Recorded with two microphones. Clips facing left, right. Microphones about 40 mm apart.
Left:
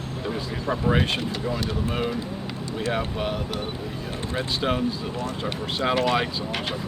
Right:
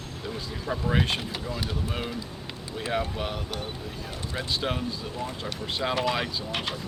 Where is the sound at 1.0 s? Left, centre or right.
Centre.